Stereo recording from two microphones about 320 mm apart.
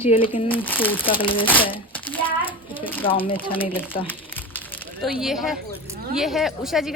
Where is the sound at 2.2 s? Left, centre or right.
Centre.